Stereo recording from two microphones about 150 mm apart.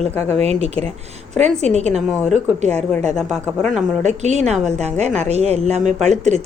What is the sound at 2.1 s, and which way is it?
Speech, 5° right (ahead or behind).